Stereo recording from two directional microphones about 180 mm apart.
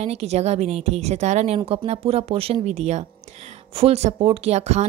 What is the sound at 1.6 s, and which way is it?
Speech, 25° right (ahead or behind).